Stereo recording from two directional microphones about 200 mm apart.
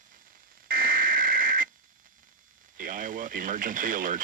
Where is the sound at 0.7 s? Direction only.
45° right (ahead or behind).